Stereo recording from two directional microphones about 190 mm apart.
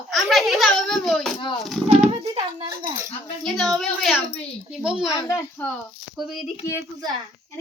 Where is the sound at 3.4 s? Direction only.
Centre (ahead or behind).